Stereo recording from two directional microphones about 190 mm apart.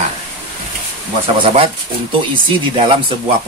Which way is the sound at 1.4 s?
30° right (ahead or behind).